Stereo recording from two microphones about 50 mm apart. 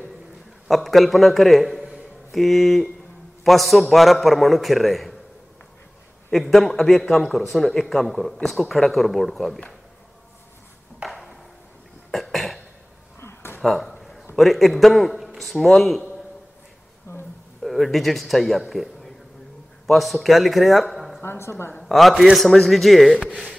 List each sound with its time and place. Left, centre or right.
0.7 s a man's voice: centre
6.3 s a man's voice: centre
11.1 s ping: centre
12.1 s cough: centre
13.2 s a sound: left
13.6 s a sound: centre
14.3 s a man's voice: centre
17.1 s a sound: left
17.6 s a man's voice: centre
21.2 s a woman's voice: left
21.8 s a man's voice: centre